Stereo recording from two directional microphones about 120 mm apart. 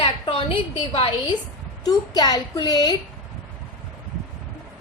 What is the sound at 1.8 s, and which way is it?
A woman's voice, 35° left (ahead or behind).